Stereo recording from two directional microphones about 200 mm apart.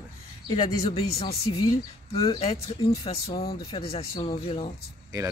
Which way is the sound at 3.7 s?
30° left (ahead or behind).